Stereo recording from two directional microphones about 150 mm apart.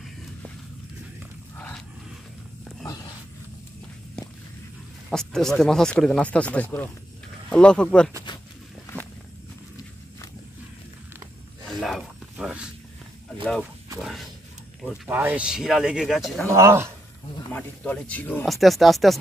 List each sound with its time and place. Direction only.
5.1 s speech: 5° left (ahead or behind)
11.6 s a sound: centre (ahead or behind)
13.9 s a sound: centre (ahead or behind)
15.0 s speech: 10° right (ahead or behind)
16.5 s speech: 20° right (ahead or behind)
17.5 s speech: 10° left (ahead or behind)